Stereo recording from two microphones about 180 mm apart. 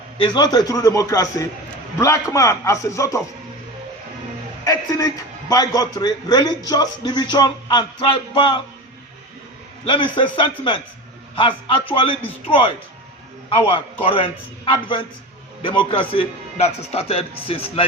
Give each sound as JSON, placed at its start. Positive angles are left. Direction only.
{"t": 0.2, "sound": "a man's voice", "side_deg": 20}
{"t": 4.6, "sound": "a man's voice", "side_deg": 20}
{"t": 9.8, "sound": "a man's voice", "side_deg": 30}
{"t": 11.3, "sound": "a man's voice", "side_deg": 25}